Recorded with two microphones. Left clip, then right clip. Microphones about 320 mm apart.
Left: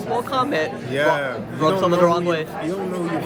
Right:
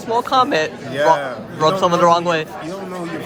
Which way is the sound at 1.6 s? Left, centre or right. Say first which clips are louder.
Right 3 dB; right.